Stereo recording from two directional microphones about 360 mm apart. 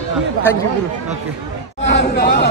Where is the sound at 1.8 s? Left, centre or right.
Left.